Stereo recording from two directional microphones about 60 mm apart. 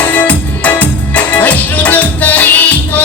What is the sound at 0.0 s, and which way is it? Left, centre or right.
Music, left.